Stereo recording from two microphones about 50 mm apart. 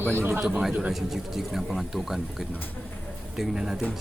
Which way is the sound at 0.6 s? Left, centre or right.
Centre.